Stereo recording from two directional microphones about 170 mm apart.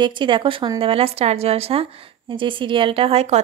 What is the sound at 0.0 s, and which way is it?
Speech, 30° right (ahead or behind).